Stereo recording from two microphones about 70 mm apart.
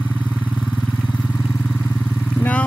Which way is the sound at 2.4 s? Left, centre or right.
Left.